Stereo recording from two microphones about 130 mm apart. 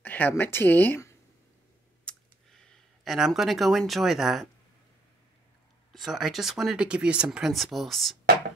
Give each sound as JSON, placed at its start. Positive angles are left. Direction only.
{"t": 0.0, "sound": "a woman's voice", "side_deg": 15}
{"t": 2.0, "sound": "a sound", "side_deg": 5}
{"t": 5.9, "sound": "speech", "side_deg": 0}